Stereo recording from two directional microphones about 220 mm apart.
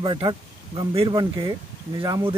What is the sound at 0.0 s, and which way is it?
Speech, 20° right (ahead or behind).